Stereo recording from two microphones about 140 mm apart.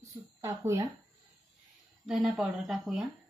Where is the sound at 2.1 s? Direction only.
5° right (ahead or behind).